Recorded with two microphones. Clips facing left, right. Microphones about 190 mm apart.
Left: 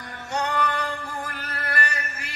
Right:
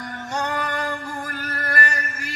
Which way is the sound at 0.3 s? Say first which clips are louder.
Left 1 dB; 45° right (ahead or behind).